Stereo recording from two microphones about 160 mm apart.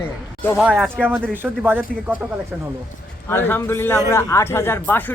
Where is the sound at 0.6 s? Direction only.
5° right (ahead or behind).